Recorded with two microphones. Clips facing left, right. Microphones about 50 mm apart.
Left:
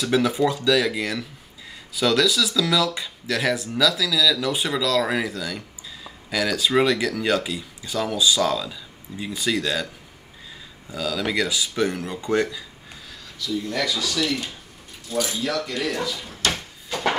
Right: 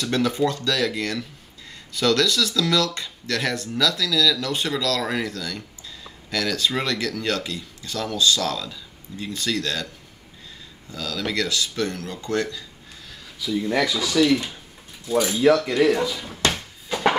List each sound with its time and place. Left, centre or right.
0.0 s speech: centre
10.9 s speech: centre
13.7 s speech: right